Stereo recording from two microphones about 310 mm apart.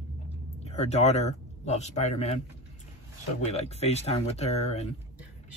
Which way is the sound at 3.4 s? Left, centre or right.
Left.